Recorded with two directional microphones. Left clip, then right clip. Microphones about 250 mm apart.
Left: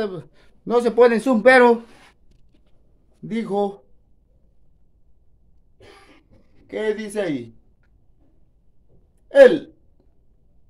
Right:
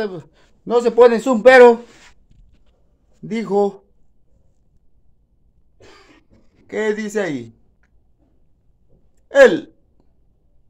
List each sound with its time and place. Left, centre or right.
0.0 s a man's voice: centre
3.3 s a man's voice: centre
6.7 s speech: centre
9.3 s speech: centre